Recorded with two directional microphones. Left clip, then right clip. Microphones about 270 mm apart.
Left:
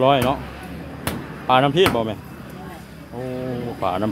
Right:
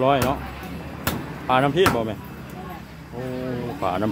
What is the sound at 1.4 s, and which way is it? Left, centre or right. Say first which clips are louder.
Speech: left 3 dB; centre.